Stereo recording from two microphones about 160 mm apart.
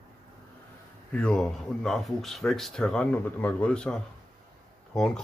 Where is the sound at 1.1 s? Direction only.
5° left (ahead or behind).